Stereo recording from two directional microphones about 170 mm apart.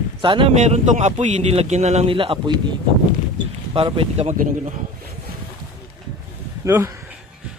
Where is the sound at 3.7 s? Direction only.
35° right (ahead or behind).